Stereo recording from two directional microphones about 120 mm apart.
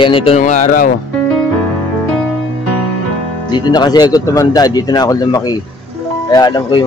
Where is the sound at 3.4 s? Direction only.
35° left (ahead or behind).